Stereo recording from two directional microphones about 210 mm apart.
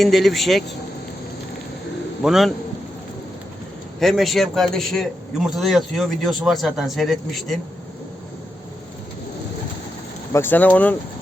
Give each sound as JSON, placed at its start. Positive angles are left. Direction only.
{"t": 0.0, "sound": "a man's voice", "side_deg": 0}
{"t": 2.2, "sound": "a man's voice", "side_deg": 0}
{"t": 4.0, "sound": "a man's voice", "side_deg": 0}
{"t": 10.3, "sound": "speech", "side_deg": 10}